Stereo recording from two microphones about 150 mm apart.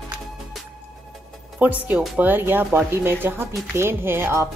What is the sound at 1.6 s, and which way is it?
Speech, 10° right (ahead or behind).